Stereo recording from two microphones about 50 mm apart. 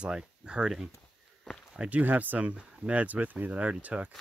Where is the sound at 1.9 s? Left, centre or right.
Right.